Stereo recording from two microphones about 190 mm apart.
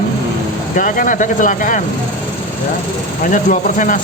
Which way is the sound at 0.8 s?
45° left (ahead or behind).